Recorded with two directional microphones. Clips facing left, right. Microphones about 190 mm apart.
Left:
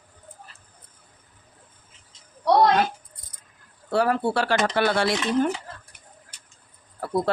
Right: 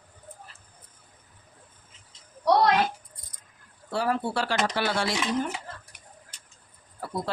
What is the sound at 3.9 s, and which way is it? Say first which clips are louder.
Speech: left 5 dB; 60° left (ahead or behind).